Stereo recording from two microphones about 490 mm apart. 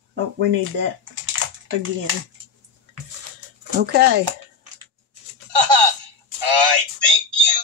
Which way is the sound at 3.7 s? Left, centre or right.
Centre.